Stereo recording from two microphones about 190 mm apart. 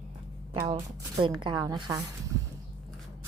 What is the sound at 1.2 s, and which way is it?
Speech, 25° right (ahead or behind).